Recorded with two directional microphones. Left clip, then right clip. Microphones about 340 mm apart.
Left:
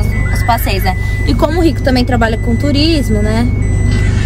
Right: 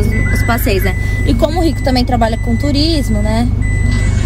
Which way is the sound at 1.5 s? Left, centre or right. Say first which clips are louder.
Left 2 dB; centre.